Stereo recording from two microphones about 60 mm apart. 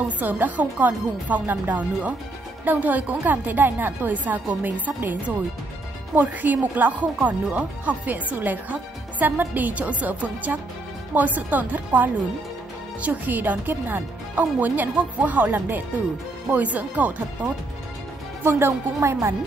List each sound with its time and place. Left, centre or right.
0.2 s a woman's voice: right
18.4 s speech: right